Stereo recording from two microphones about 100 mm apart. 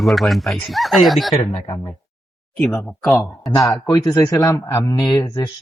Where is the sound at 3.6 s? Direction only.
30° left (ahead or behind).